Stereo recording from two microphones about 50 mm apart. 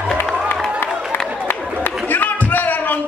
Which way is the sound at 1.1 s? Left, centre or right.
Left.